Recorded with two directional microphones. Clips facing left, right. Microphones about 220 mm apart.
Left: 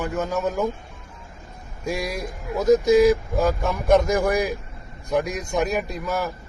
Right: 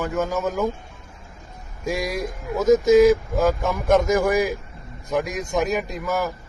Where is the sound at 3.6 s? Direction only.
15° left (ahead or behind).